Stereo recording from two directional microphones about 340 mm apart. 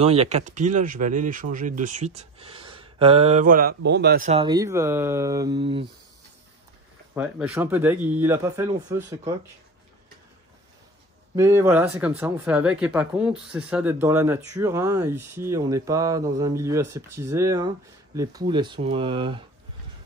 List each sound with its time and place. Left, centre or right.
0.0 s speech: centre
7.2 s speech: centre
11.3 s speech: centre